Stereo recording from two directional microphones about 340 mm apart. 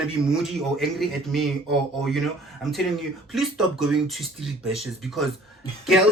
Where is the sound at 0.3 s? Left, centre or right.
Centre.